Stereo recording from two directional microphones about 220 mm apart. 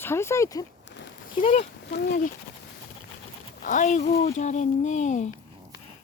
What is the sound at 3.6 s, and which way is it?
Speech, 35° left (ahead or behind).